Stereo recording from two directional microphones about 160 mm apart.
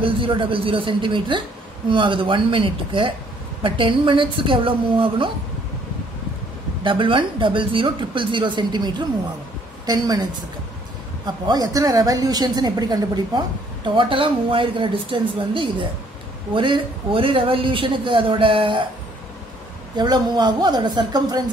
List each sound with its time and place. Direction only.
0.0 s speech: 30° right (ahead or behind)
6.8 s a woman's voice: 30° right (ahead or behind)
11.2 s a woman's voice: 25° right (ahead or behind)
20.0 s a woman's voice: 25° right (ahead or behind)